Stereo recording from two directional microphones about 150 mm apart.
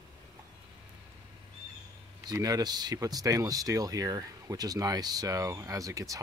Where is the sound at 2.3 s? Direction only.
25° right (ahead or behind).